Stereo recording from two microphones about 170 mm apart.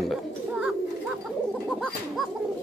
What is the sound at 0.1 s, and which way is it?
Bird, 5° right (ahead or behind).